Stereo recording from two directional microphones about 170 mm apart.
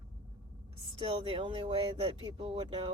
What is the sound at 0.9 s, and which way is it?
Speech, 30° right (ahead or behind).